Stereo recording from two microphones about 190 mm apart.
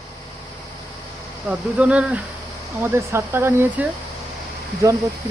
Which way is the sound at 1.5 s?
5° right (ahead or behind).